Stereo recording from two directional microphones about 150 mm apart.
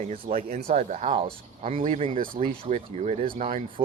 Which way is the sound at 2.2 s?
70° right (ahead or behind).